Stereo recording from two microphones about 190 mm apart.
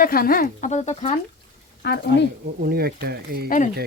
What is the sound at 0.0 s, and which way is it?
Speech, 50° left (ahead or behind).